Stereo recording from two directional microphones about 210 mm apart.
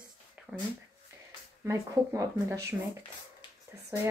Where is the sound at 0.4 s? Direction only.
5° right (ahead or behind).